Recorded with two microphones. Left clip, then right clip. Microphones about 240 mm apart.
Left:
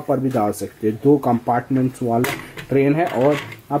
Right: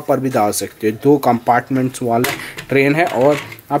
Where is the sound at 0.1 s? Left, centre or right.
Centre.